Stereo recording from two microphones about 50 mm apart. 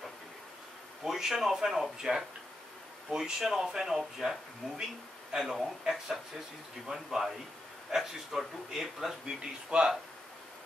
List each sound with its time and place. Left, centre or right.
1.0 s speech: centre
9.4 s speech: centre